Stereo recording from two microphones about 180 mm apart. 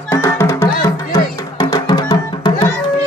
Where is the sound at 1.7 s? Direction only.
25° left (ahead or behind).